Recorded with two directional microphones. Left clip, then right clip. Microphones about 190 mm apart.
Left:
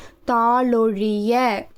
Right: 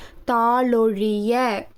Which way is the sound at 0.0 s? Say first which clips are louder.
Left 1 dB; 5° left (ahead or behind).